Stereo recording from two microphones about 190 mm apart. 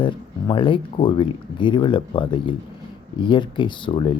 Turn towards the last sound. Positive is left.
turn(degrees=25)  # may be behind; listen again after turning